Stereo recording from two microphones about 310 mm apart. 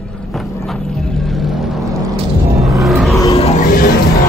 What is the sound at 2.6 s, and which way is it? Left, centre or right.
Music, centre.